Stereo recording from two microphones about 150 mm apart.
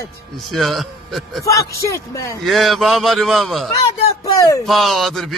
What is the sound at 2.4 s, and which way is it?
A man's voice, centre (ahead or behind).